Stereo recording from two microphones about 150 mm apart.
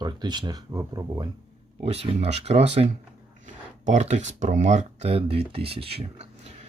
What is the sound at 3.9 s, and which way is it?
Speech, 50° right (ahead or behind).